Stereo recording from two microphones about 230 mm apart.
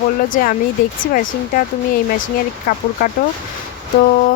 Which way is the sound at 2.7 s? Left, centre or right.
Left.